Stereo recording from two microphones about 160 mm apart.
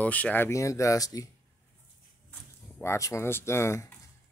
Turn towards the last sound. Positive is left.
turn(degrees=15)  # may be behind; listen again after turning